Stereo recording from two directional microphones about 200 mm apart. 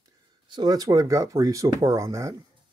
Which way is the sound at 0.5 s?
20° right (ahead or behind).